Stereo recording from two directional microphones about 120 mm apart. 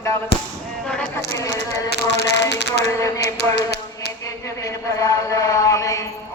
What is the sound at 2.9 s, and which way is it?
Chant, 25° left (ahead or behind).